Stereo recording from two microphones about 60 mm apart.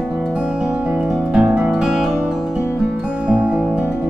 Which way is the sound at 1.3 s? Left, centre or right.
Right.